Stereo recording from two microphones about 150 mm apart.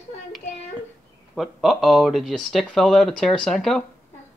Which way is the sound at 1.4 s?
Centre (ahead or behind).